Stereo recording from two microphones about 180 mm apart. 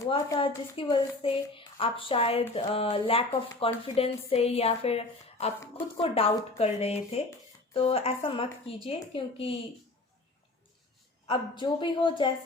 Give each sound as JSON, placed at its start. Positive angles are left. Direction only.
{"t": 0.0, "sound": "a woman's voice", "side_deg": 25}
{"t": 11.3, "sound": "a woman's voice", "side_deg": 25}